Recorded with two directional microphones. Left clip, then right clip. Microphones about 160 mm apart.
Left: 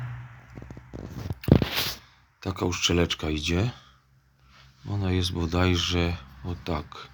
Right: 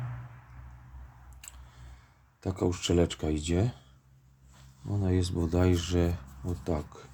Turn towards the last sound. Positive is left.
turn(degrees=-20)  # may be behind; listen again after turning